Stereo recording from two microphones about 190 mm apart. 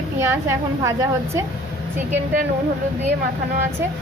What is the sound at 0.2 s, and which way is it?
A woman's voice, 15° right (ahead or behind).